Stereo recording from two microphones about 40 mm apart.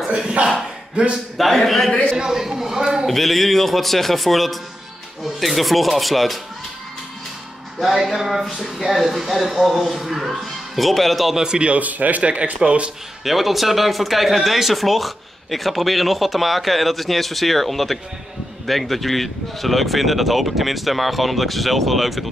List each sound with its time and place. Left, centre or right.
0.0 s speech: right
1.4 s speech: centre
1.9 s speech: left
2.1 s speech: centre
3.1 s speech: centre
7.8 s speech: centre
10.4 s speech: centre
11.3 s a man's voice: centre
11.7 s speech: right
12.2 s speech: right
13.2 s speech: centre